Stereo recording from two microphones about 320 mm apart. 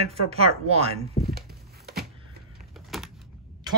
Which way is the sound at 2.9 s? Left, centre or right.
Centre.